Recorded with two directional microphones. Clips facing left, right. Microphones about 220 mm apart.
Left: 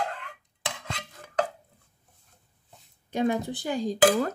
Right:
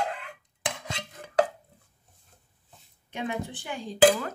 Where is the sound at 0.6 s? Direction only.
15° right (ahead or behind).